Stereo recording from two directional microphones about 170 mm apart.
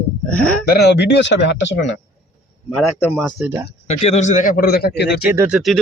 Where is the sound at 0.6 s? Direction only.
70° left (ahead or behind); by 2.0 s 90° left.